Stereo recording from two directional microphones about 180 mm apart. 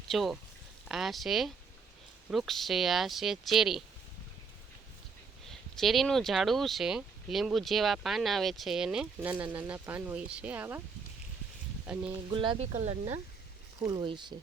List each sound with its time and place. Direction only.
0.1 s speech: centre (ahead or behind)
5.5 s speech: centre (ahead or behind)
11.9 s speech: 5° right (ahead or behind)
12.3 s speech: 30° right (ahead or behind)
13.8 s speech: 25° right (ahead or behind)